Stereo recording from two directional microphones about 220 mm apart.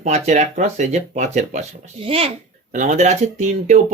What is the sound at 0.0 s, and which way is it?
A child's voice, 35° right (ahead or behind).